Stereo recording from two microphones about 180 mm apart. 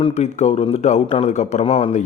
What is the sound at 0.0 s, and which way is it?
A man's voice, 35° left (ahead or behind).